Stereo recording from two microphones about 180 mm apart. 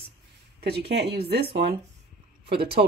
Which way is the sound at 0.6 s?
65° right (ahead or behind).